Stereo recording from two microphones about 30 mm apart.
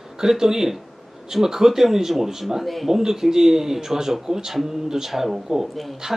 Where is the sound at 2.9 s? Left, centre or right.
Centre.